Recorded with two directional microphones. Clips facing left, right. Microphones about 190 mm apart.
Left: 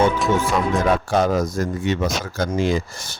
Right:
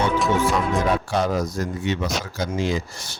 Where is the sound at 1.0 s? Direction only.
50° left (ahead or behind).